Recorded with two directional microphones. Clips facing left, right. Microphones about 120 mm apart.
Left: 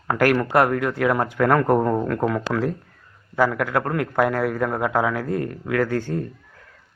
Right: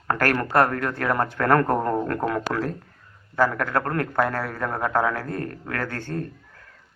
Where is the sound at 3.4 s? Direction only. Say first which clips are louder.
Left 2 dB; 15° left (ahead or behind).